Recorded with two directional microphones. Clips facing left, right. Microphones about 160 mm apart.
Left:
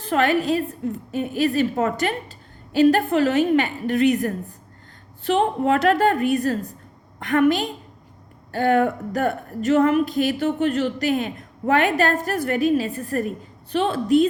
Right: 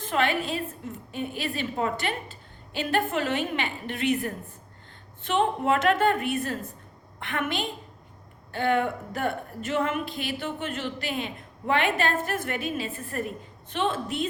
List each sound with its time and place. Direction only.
0.0 s speech: 40° left (ahead or behind)